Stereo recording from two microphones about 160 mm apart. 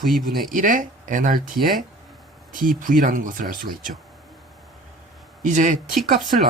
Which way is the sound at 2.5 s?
55° right (ahead or behind).